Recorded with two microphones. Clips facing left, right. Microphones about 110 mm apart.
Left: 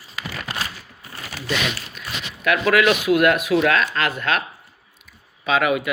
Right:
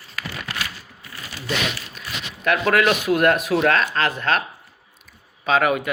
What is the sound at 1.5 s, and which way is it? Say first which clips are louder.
Speech: even; 35° right (ahead or behind).